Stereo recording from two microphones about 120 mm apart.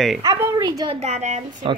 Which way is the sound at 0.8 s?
60° right (ahead or behind).